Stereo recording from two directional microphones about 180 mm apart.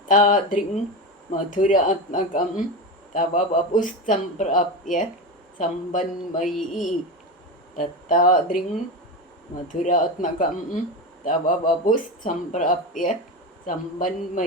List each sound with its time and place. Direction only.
0.1 s speech: 45° left (ahead or behind)
6.4 s speech: centre (ahead or behind)
7.8 s speech: 45° left (ahead or behind)
9.6 s speech: 45° left (ahead or behind)